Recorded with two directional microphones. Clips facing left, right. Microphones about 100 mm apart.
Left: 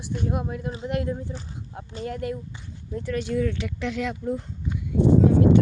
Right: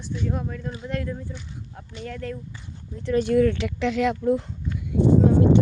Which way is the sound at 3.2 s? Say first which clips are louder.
Right 8 dB; 55° right (ahead or behind).